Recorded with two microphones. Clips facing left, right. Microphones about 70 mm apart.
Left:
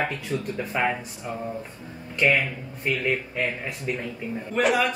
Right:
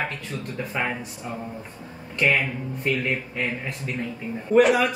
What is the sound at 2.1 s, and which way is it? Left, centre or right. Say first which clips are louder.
Speech: even; centre.